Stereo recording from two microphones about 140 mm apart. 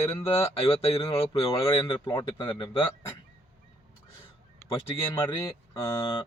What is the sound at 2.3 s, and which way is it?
Speech, 35° left (ahead or behind).